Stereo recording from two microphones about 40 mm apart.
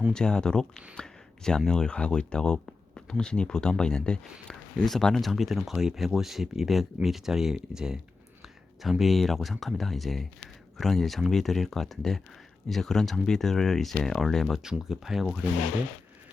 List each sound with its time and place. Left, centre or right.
0.1 s speech: centre
5.2 s speech: centre
8.8 s speech: centre
14.6 s speech: centre